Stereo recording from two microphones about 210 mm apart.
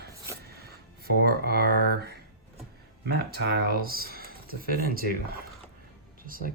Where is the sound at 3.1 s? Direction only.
50° right (ahead or behind).